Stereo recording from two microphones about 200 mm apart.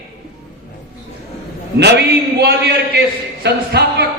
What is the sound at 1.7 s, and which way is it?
A man's voice, 55° right (ahead or behind).